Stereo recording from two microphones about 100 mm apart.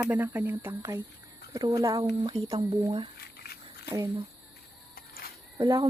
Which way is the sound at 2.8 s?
60° right (ahead or behind).